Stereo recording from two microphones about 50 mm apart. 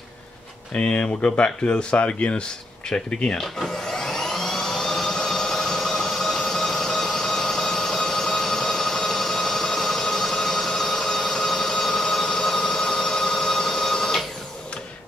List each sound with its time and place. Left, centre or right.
0.7 s speech: left
3.3 s vacuum cleaner: centre